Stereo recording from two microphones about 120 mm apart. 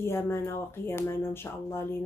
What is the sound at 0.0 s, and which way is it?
Speech, 20° left (ahead or behind).